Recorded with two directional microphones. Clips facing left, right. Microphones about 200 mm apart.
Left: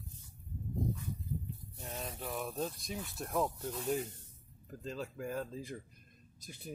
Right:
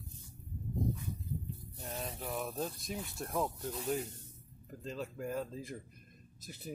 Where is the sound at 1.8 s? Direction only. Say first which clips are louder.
Right 1 dB; 25° right (ahead or behind).